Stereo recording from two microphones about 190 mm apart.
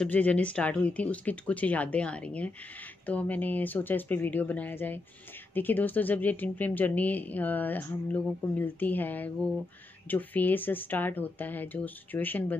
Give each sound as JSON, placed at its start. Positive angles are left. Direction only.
{"t": 0.0, "sound": "speech", "side_deg": 10}